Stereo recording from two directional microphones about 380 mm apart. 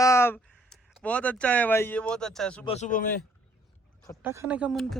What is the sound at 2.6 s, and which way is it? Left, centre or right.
Speech, centre.